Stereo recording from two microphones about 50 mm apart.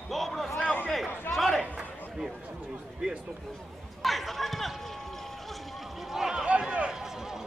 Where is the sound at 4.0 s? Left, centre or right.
Centre.